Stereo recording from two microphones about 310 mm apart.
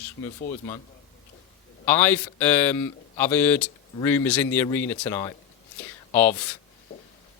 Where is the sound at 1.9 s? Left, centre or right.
Centre.